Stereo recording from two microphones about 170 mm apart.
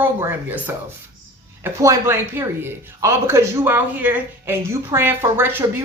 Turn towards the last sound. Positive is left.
turn(degrees=-15)  # may be behind; listen again after turning